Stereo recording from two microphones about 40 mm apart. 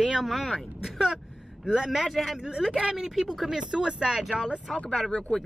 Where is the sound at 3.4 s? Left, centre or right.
Centre.